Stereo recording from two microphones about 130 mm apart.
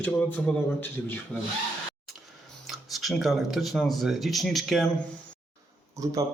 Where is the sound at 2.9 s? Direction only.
Centre (ahead or behind).